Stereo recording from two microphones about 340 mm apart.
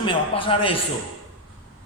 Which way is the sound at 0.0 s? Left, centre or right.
Centre.